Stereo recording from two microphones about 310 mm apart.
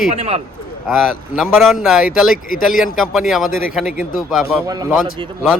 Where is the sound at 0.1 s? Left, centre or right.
Centre.